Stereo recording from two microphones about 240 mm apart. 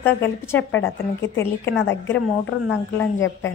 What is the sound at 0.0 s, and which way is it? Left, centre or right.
Speech, centre.